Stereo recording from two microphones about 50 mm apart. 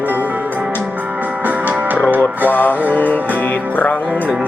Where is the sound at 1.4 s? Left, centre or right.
Right.